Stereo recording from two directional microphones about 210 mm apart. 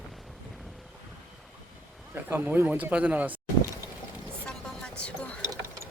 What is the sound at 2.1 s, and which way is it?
A man's voice, 10° right (ahead or behind).